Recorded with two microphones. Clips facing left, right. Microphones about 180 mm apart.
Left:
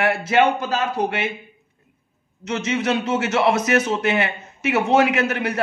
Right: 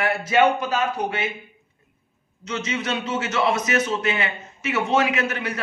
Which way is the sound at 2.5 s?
60° left (ahead or behind).